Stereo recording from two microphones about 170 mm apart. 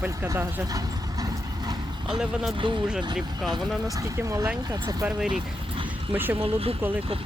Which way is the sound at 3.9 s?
20° right (ahead or behind).